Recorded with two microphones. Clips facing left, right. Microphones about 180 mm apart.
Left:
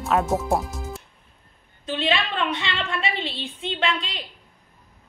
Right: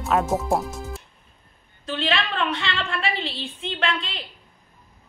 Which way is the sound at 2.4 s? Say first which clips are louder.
Even; 15° left (ahead or behind).